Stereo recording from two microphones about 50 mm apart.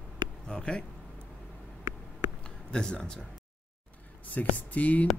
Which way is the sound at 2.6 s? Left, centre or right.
Centre.